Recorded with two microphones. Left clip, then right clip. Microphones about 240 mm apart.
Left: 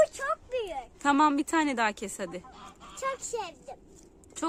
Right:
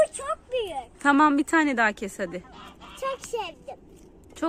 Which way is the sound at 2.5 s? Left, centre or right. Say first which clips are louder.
Right 3 dB; left.